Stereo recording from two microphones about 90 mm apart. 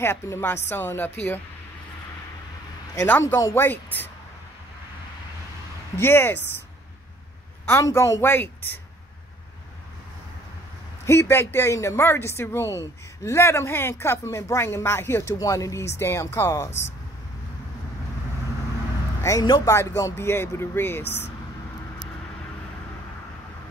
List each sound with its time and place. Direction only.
0.0 s speech: 30° left (ahead or behind)
3.1 s speech: 25° left (ahead or behind)
5.9 s speech: 25° left (ahead or behind)
7.8 s speech: 35° left (ahead or behind)
11.1 s speech: 25° left (ahead or behind)
19.2 s speech: 35° left (ahead or behind)